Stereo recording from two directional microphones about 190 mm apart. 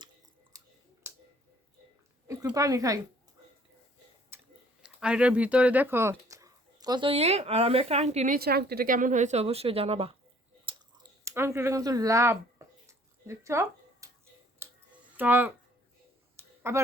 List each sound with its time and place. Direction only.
0.5 s scissors: 20° right (ahead or behind)
1.0 s finger snapping: 15° right (ahead or behind)
2.2 s a woman's voice: 15° right (ahead or behind)
4.3 s a sound: 10° right (ahead or behind)
4.8 s speech: 5° right (ahead or behind); by 8.4 s 35° right (ahead or behind)
8.4 s a woman's voice: 55° right (ahead or behind); by 10.2 s 30° right (ahead or behind)
10.7 s chewing: 20° right (ahead or behind)
14.6 s a sound: 10° right (ahead or behind)
15.2 s a woman's voice: 10° right (ahead or behind)
16.4 s a sound: 10° right (ahead or behind)